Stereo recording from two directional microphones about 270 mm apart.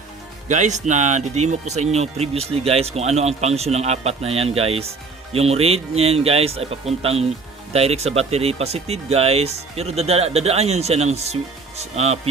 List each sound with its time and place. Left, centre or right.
0.4 s speech: right